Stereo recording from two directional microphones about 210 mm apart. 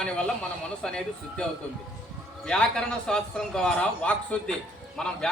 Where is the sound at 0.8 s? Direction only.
5° left (ahead or behind).